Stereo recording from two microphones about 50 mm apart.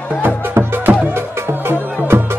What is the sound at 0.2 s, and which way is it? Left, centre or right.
Music, right.